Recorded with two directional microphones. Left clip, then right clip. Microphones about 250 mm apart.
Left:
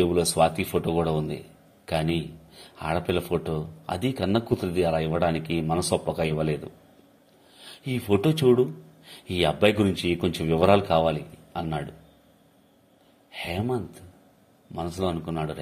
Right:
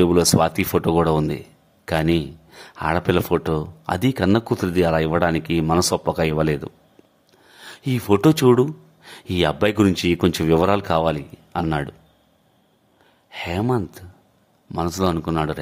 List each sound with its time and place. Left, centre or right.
0.0 s speech: right
13.3 s speech: right